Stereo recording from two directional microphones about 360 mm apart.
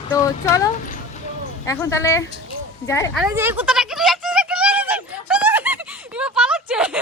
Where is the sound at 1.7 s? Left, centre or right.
Centre.